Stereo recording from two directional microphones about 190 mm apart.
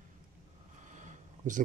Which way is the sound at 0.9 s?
40° right (ahead or behind).